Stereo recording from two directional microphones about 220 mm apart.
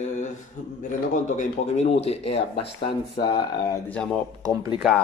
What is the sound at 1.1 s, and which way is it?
A man's voice, 30° left (ahead or behind).